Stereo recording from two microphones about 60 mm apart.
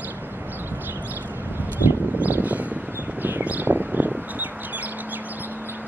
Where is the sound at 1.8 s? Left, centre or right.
Right.